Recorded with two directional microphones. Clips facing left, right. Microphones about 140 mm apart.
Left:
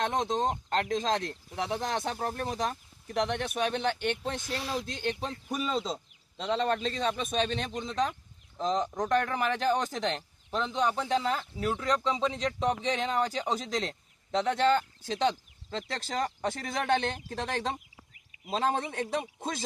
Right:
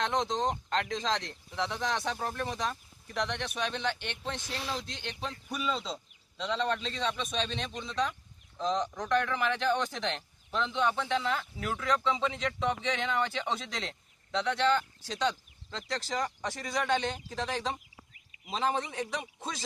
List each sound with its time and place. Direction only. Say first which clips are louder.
0.0 s speech: left 1 dB; 50° left (ahead or behind)